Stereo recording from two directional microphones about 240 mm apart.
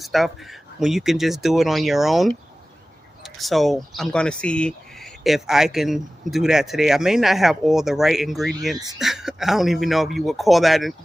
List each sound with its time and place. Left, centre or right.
0.0 s speech: centre